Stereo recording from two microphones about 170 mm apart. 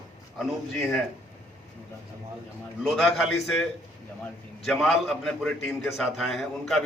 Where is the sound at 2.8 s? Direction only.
Centre (ahead or behind).